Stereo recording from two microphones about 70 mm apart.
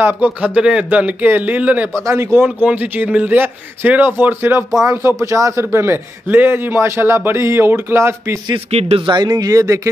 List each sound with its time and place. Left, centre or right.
0.0 s a man's voice: right
0.6 s a man's voice: centre
2.0 s speech: right
2.3 s a man's voice: right
5.2 s speech: right
9.0 s speech: right